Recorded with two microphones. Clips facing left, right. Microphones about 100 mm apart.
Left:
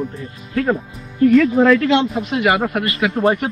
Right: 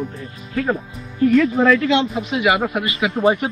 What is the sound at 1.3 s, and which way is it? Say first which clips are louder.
Speech: left 2 dB; centre (ahead or behind).